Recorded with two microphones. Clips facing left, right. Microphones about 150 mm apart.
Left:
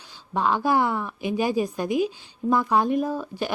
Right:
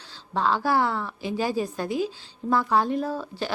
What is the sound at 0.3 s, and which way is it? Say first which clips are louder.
A woman's voice: left 1 dB; 15° left (ahead or behind).